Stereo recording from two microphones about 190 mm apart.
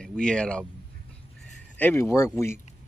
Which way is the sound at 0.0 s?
5° left (ahead or behind).